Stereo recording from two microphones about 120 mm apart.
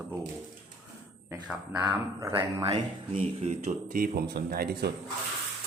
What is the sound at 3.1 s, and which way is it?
Speech, 85° right.